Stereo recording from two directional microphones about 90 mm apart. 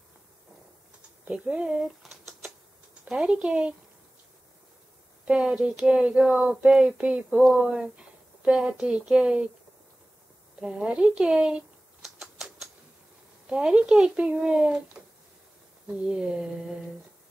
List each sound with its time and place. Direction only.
1.2 s speech: 15° right (ahead or behind)
5.2 s speech: 10° right (ahead or behind)
10.6 s typing: 10° right (ahead or behind)
13.5 s speech: 10° right (ahead or behind)